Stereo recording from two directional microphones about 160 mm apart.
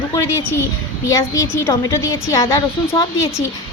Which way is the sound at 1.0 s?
20° left (ahead or behind).